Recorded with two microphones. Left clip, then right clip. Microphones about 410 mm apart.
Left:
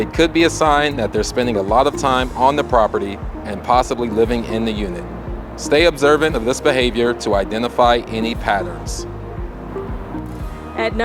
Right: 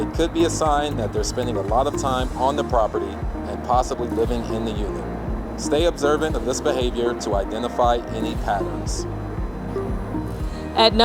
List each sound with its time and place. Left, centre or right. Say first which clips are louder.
0.0 s speech: left 6 dB; left
10.8 s music: right 4 dB; centre